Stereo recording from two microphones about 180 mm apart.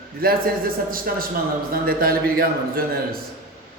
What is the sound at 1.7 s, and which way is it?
A man's voice, 55° right (ahead or behind).